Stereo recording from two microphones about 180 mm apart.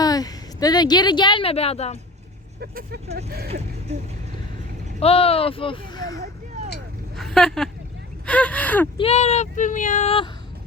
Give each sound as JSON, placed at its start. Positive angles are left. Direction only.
{"t": 0.0, "sound": "a woman's voice", "side_deg": 20}
{"t": 2.6, "sound": "speech", "side_deg": -60}
{"t": 4.9, "sound": "speech", "side_deg": 35}
{"t": 7.2, "sound": "speech", "side_deg": 0}
{"t": 9.0, "sound": "speech", "side_deg": 35}